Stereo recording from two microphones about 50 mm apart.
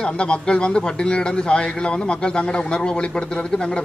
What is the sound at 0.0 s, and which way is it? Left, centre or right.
A man's voice, left.